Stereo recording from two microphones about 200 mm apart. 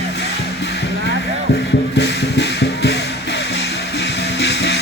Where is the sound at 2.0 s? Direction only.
60° left (ahead or behind).